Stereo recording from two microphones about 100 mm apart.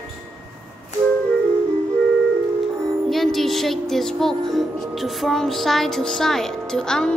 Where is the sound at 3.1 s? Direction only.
Centre (ahead or behind).